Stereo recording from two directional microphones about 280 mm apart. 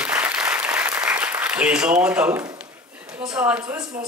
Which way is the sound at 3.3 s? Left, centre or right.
Centre.